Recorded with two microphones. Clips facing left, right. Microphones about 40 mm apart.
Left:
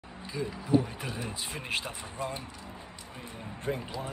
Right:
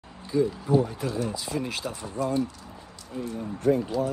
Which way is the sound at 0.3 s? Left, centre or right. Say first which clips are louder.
Right 5 dB; centre.